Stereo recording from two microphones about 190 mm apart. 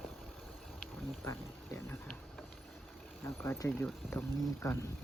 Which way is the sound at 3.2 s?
15° left (ahead or behind).